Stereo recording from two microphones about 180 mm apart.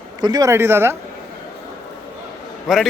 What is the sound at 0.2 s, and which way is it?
Speech, 20° right (ahead or behind).